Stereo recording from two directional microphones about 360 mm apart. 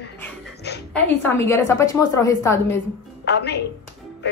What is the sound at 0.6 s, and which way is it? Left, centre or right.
Speech, left.